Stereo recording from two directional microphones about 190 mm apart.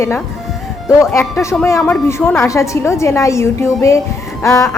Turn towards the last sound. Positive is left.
turn(degrees=15)  # may be behind; listen again after turning